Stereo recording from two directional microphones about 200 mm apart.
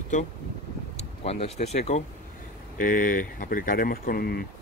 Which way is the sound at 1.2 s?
30° left (ahead or behind).